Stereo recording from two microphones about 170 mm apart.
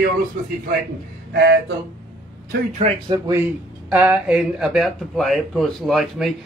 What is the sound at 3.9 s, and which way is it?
A man's voice, 5° right (ahead or behind).